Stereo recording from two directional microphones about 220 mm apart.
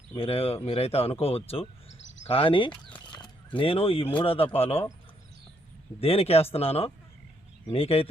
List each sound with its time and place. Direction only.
0.1 s speech: 25° left (ahead or behind)
6.0 s speech: 25° left (ahead or behind)